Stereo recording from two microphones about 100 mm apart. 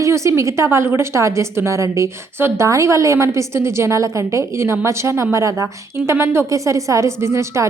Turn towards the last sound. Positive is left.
turn(degrees=-30)  # may be behind; listen again after turning